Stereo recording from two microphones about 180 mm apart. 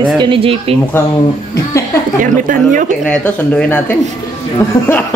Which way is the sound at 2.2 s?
45° right (ahead or behind).